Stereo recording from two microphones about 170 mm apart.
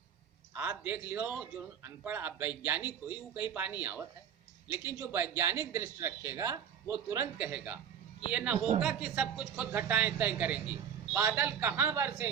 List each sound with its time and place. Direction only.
0.5 s a man's voice: 10° right (ahead or behind)